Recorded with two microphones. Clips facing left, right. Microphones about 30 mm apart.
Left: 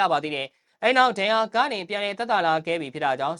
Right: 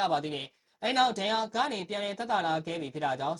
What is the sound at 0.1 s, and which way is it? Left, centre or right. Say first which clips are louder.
Speech: left 6 dB; left.